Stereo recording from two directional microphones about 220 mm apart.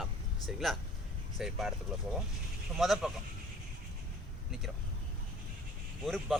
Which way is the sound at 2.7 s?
Centre (ahead or behind).